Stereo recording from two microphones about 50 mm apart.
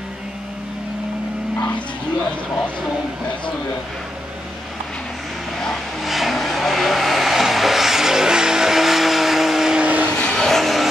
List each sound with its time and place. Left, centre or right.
6.0 s vehicle: centre
9.8 s vehicle: right
10.0 s vehicle: centre